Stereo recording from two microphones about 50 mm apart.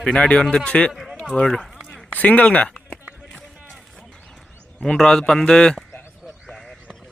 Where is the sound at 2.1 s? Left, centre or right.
Left.